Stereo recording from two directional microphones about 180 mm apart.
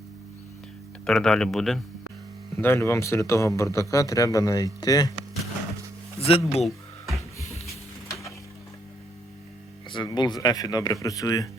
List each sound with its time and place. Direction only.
1.0 s a man's voice: 5° left (ahead or behind)
2.6 s a man's voice: 15° left (ahead or behind)
6.1 s music: 35° left (ahead or behind)
6.6 s music: centre (ahead or behind)
9.9 s speech: 25° left (ahead or behind)